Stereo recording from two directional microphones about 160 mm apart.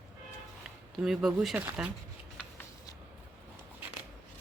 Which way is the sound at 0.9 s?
Centre (ahead or behind).